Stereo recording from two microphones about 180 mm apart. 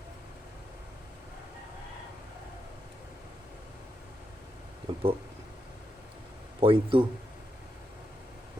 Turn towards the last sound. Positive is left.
turn(degrees=-30)  # may be behind; listen again after turning